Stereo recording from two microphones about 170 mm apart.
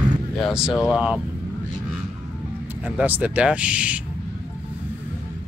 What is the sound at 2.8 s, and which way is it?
Speech, 10° right (ahead or behind).